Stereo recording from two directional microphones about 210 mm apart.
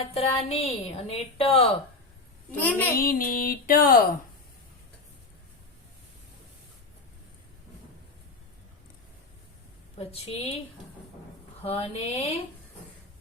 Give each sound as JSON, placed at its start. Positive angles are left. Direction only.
{"t": 0.1, "sound": "a woman's voice", "side_deg": 30}
{"t": 2.6, "sound": "a child's voice", "side_deg": 10}
{"t": 3.0, "sound": "a sound", "side_deg": 45}
{"t": 10.0, "sound": "a woman's voice", "side_deg": 30}
{"t": 11.6, "sound": "a woman's voice", "side_deg": 30}